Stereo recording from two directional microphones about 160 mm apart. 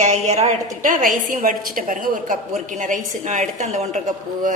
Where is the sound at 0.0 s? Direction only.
45° right (ahead or behind).